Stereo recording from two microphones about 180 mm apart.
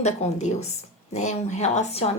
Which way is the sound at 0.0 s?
40° left (ahead or behind).